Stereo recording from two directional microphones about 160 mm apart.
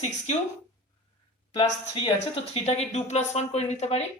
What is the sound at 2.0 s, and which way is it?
Speech, 40° left (ahead or behind).